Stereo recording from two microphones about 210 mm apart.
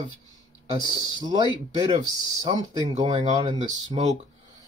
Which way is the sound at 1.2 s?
20° right (ahead or behind).